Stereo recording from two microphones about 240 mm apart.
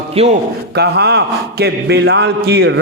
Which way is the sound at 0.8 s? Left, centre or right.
Right.